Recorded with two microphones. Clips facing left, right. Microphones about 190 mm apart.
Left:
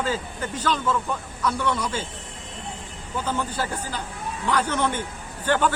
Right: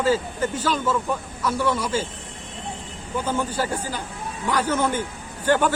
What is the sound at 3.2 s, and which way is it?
Speech, 10° right (ahead or behind).